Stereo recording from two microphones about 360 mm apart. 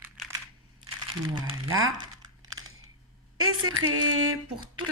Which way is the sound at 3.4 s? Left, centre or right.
Right.